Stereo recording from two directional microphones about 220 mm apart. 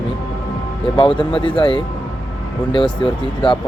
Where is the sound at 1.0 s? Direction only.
25° left (ahead or behind).